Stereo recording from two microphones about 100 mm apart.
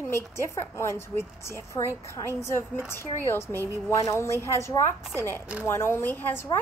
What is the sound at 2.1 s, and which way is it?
A woman's voice, 25° left (ahead or behind).